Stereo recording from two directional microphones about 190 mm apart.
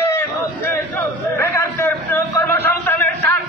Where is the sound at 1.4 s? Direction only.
10° left (ahead or behind).